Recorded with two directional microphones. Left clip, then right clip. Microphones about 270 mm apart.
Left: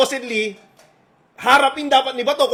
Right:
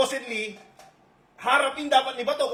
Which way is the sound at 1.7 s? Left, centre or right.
Left.